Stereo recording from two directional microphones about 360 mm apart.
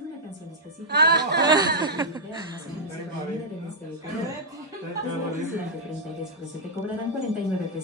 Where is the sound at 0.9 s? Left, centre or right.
Right.